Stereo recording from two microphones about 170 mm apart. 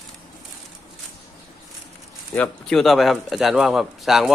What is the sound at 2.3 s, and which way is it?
A man's voice, 5° left (ahead or behind).